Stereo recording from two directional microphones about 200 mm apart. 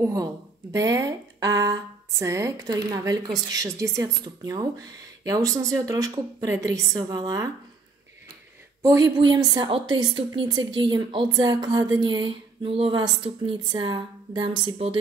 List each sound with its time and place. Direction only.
0.0 s speech: 15° right (ahead or behind)
8.8 s a woman's voice: 20° right (ahead or behind)